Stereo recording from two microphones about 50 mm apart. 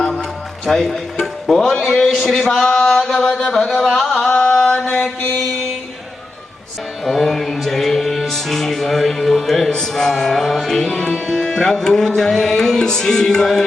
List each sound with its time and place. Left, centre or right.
0.6 s speech: centre
2.4 s chant: centre
3.8 s chant: centre
7.0 s music: centre